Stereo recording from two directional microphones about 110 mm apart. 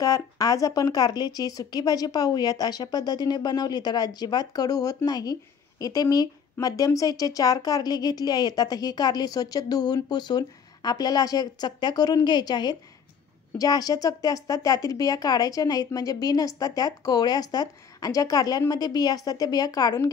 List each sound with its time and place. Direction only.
0.0 s speech: 35° left (ahead or behind)